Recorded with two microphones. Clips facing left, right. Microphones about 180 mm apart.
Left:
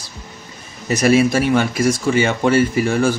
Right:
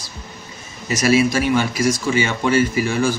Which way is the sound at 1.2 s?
55° left (ahead or behind).